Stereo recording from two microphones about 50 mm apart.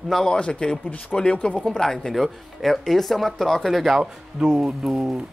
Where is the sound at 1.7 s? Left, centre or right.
Centre.